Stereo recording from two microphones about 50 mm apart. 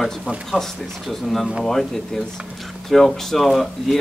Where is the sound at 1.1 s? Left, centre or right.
Centre.